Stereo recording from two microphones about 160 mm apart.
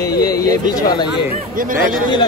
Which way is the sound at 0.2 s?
20° left (ahead or behind).